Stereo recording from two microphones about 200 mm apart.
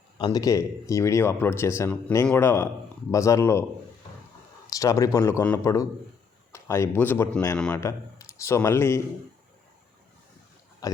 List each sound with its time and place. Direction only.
0.2 s speech: 20° left (ahead or behind)
4.6 s speech: 15° left (ahead or behind)
10.8 s speech: 15° left (ahead or behind)